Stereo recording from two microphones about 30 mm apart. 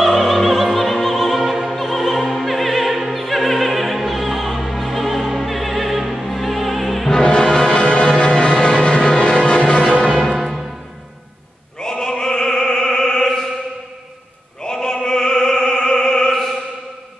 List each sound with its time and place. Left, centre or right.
0.0 s opera: centre
6.2 s music: centre
7.4 s music: left
10.0 s music: centre
11.8 s opera: centre
14.6 s opera: left